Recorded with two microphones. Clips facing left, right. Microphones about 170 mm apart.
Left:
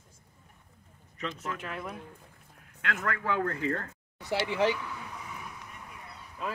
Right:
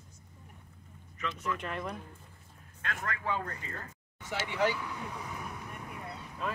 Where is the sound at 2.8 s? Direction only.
70° left (ahead or behind).